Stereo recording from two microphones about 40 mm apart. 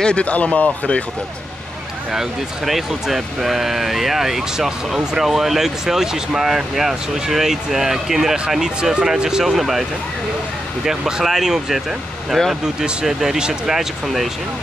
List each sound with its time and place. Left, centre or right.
0.0 s speech: left
2.1 s speech: centre
10.9 s speech: centre
12.3 s speech: centre
13.0 s speech: centre
14.0 s speech: centre